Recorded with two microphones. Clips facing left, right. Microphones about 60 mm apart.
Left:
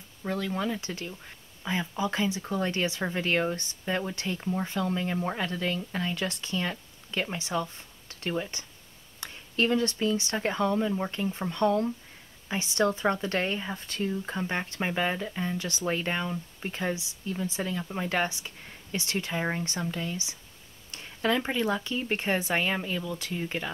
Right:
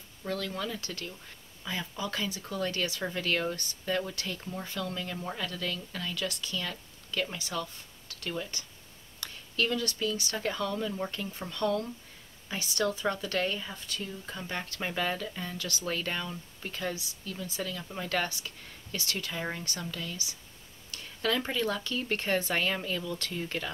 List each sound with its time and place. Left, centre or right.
0.2 s speech: centre